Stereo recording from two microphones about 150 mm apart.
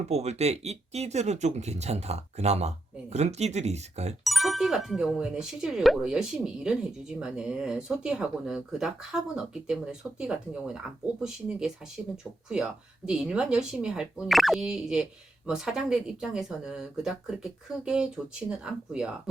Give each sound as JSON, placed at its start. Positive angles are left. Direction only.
{"t": 0.0, "sound": "speech", "side_deg": -45}
{"t": 4.2, "sound": "speech", "side_deg": 0}